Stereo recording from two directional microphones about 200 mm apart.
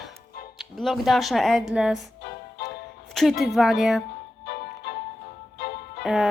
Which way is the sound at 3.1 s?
Centre (ahead or behind).